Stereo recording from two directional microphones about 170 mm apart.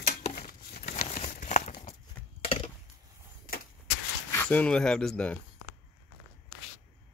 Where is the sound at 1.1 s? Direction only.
50° left (ahead or behind).